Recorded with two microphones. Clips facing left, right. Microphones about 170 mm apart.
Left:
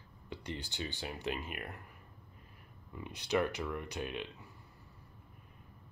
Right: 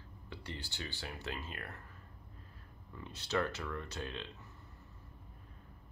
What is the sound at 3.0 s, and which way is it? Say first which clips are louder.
Speech: left 3 dB; 15° left (ahead or behind).